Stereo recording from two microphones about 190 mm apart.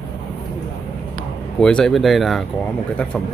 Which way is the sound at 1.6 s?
5° left (ahead or behind).